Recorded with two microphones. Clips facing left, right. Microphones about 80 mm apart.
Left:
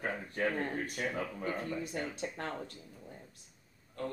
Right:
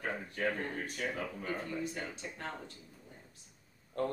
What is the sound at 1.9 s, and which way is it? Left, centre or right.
Speech, left.